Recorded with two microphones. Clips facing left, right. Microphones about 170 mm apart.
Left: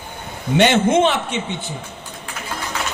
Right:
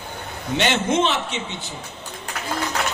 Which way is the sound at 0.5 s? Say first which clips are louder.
Left 6 dB; 55° left (ahead or behind).